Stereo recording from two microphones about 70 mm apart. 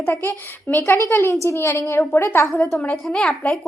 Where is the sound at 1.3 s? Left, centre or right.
Left.